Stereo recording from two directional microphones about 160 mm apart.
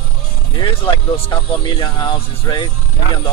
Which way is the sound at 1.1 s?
30° left (ahead or behind).